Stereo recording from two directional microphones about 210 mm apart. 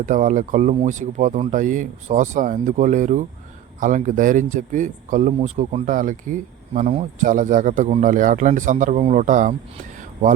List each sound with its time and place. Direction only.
0.0 s speech: 40° right (ahead or behind)